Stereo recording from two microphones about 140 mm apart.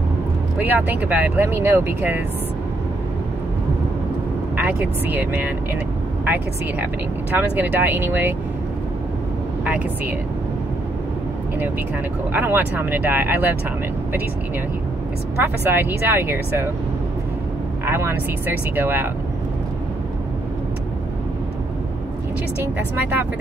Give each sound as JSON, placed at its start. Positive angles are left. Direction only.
{"t": 0.6, "sound": "speech", "side_deg": -10}
{"t": 4.6, "sound": "speech", "side_deg": -15}
{"t": 12.3, "sound": "speech", "side_deg": -15}
{"t": 15.4, "sound": "speech", "side_deg": -15}
{"t": 17.8, "sound": "speech", "side_deg": -15}